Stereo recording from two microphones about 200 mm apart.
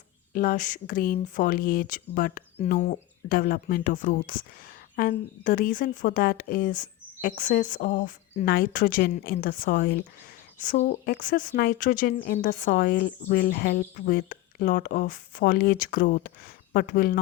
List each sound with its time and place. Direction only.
0.3 s speech: 40° left (ahead or behind)